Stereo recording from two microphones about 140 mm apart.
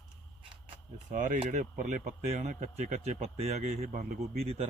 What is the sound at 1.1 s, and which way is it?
Speech, 65° right (ahead or behind).